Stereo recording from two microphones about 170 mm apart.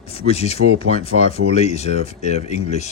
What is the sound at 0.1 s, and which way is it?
Speech, 35° left (ahead or behind).